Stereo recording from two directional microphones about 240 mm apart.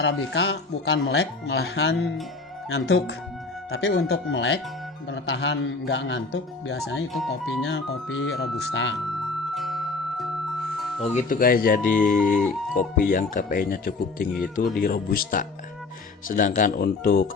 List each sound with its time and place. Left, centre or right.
0.0 s speech: left
7.1 s speech: centre
7.6 s speech: left
9.6 s music: centre
11.1 s speech: left